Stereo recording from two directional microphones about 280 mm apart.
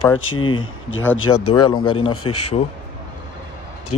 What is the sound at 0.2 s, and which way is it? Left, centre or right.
Speech, left.